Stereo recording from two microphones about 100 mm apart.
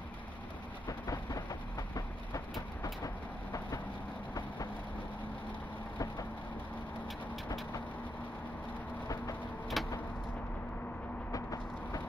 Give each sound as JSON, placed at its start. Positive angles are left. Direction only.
{"t": 0.8, "sound": "vehicle", "side_deg": 35}
{"t": 9.8, "sound": "vehicle", "side_deg": 0}
{"t": 11.3, "sound": "a sound", "side_deg": 35}